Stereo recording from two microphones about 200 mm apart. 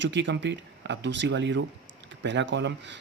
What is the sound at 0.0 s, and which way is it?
Speech, 65° right (ahead or behind).